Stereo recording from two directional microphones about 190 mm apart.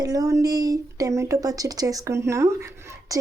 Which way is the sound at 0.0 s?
20° right (ahead or behind).